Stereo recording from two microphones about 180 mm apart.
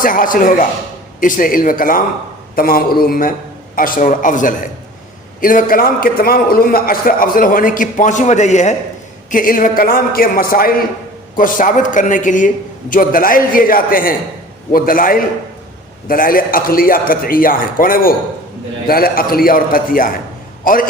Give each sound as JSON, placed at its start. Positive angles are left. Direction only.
{"t": 0.0, "sound": "a man's voice", "side_deg": 50}